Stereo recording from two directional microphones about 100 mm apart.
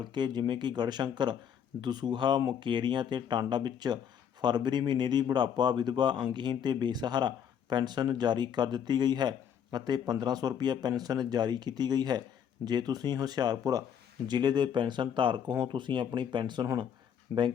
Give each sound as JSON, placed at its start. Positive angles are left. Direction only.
{"t": 0.0, "sound": "speech", "side_deg": -50}
{"t": 17.3, "sound": "speech", "side_deg": -35}